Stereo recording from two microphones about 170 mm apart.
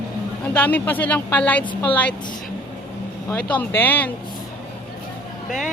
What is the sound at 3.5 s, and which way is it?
Speech, 10° left (ahead or behind).